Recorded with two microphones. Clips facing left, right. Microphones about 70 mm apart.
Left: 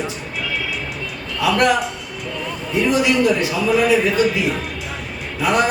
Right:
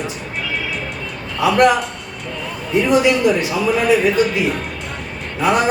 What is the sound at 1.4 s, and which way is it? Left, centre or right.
Speech, right.